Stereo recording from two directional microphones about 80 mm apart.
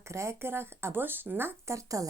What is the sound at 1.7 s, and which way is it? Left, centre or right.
Speech, right.